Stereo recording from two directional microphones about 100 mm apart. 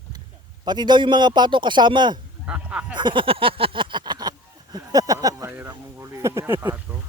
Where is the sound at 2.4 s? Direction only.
15° right (ahead or behind).